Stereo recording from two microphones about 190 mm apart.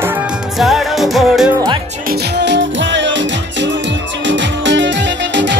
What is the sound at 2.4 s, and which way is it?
Music, 70° right (ahead or behind).